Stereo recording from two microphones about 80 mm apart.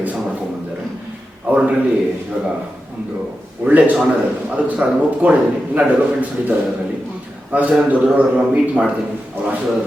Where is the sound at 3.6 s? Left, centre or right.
Centre.